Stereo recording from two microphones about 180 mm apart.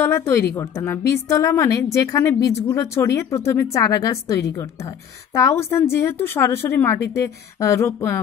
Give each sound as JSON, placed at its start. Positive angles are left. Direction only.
{"t": 0.0, "sound": "a woman's voice", "side_deg": 15}